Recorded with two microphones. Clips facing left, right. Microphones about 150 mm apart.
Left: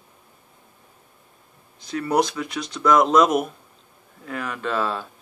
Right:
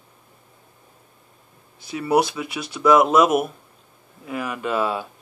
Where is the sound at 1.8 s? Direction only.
10° right (ahead or behind).